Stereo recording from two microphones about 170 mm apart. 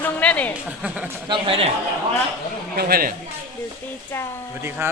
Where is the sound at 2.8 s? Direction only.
60° right (ahead or behind).